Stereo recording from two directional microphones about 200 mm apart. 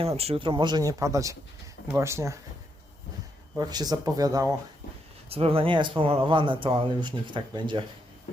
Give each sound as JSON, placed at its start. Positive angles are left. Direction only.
{"t": 0.2, "sound": "speech", "side_deg": -30}
{"t": 3.5, "sound": "speech", "side_deg": -20}
{"t": 5.3, "sound": "speech", "side_deg": -30}